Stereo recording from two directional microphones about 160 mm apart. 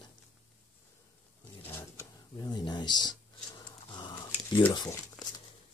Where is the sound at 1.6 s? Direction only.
15° left (ahead or behind).